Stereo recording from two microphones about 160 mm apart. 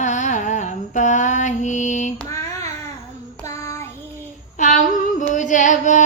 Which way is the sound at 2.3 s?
20° left (ahead or behind).